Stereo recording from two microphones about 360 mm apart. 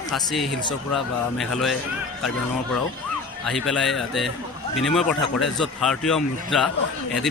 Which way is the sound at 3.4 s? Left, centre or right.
Centre.